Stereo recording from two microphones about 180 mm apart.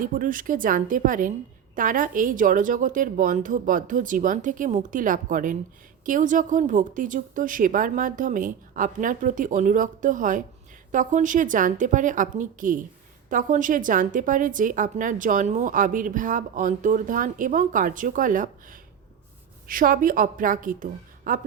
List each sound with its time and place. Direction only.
0.0 s a woman's voice: 50° right (ahead or behind)